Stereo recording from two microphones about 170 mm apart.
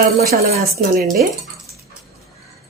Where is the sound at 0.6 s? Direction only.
60° right (ahead or behind).